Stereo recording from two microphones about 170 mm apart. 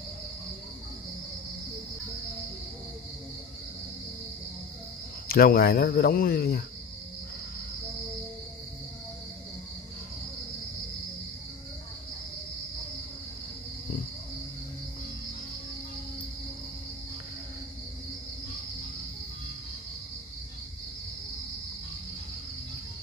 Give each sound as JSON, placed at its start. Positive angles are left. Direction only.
{"t": 5.3, "sound": "speech", "side_deg": 65}